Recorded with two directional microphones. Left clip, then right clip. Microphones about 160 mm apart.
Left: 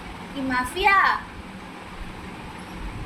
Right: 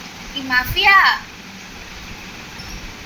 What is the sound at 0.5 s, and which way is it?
Speech, 15° left (ahead or behind).